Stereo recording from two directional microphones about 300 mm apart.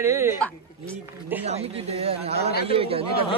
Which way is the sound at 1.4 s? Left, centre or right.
Right.